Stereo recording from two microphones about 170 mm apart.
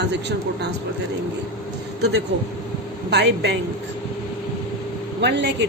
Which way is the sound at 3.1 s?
80° right.